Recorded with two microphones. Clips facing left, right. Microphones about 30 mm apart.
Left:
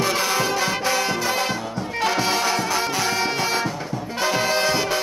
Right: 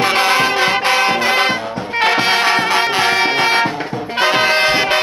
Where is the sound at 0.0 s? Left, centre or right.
Right.